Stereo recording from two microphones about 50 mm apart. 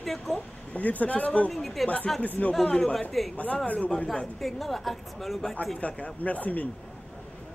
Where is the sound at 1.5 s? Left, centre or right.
Centre.